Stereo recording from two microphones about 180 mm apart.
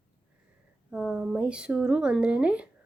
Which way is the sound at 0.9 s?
5° right (ahead or behind).